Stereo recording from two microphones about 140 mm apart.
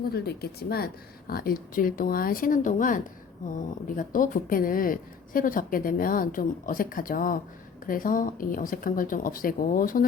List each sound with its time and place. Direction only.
1.3 s speech: 90° left